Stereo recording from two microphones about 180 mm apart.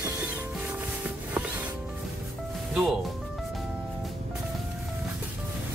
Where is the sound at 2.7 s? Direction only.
Centre (ahead or behind).